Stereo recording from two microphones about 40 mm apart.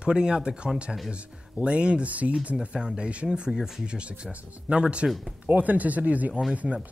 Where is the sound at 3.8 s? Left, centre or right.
Right.